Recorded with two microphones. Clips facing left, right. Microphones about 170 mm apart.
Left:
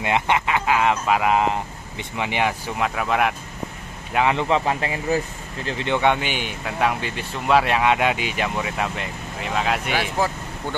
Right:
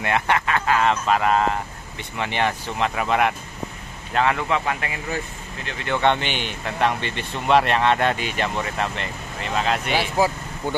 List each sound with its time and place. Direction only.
0.0 s speech: 15° left (ahead or behind); by 3.3 s centre (ahead or behind)
4.1 s a man's voice: 15° left (ahead or behind)
4.4 s speech: 30° left (ahead or behind)
5.9 s speech: 10° left (ahead or behind)
9.9 s speech: 10° right (ahead or behind)